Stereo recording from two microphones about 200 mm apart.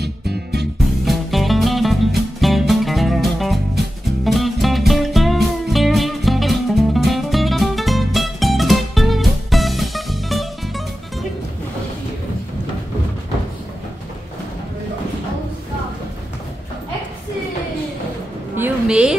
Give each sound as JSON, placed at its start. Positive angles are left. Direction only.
{"t": 0.0, "sound": "music", "side_deg": -55}
{"t": 1.0, "sound": "music", "side_deg": 0}
{"t": 18.6, "sound": "a sound", "side_deg": -5}